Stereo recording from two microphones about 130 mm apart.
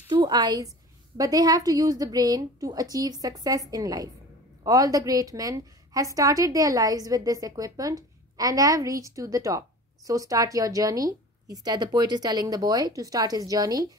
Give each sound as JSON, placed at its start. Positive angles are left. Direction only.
{"t": 0.1, "sound": "a woman's voice", "side_deg": -35}